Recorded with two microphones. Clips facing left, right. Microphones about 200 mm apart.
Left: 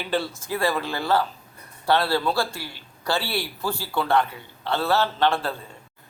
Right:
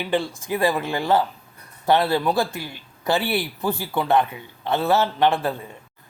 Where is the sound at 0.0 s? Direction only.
15° right (ahead or behind).